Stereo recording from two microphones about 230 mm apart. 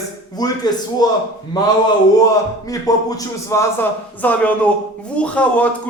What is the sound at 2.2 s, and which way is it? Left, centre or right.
A man's voice, centre.